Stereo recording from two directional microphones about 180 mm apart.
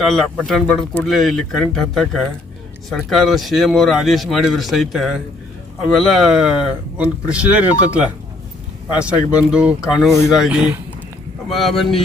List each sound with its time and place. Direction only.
0.0 s speech: centre (ahead or behind)